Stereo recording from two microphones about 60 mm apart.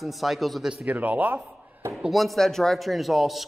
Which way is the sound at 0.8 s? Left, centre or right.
Right.